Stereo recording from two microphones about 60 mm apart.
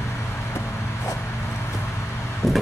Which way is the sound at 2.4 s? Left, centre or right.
Centre.